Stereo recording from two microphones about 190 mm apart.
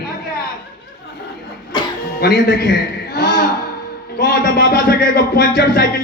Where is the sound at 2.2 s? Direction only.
55° left (ahead or behind).